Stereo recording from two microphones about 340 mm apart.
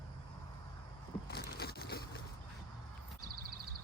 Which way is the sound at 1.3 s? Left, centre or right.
Left.